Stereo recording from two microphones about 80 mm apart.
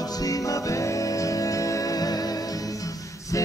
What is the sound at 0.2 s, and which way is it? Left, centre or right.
Music, left.